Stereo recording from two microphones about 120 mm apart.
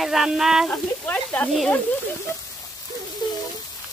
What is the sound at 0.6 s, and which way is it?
Speech, 15° left (ahead or behind).